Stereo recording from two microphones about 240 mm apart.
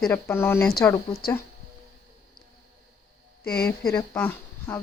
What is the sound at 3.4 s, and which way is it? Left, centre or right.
Speech, left.